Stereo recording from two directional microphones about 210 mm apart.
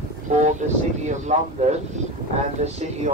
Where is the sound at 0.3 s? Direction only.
35° right (ahead or behind).